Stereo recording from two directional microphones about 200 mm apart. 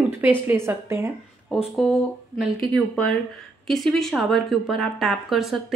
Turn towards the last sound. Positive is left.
turn(degrees=0)  # may be behind; listen again after turning